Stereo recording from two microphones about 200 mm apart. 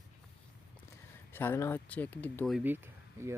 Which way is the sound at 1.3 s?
10° left (ahead or behind).